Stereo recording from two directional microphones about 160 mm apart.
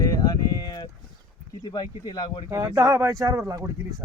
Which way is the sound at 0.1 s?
25° left (ahead or behind).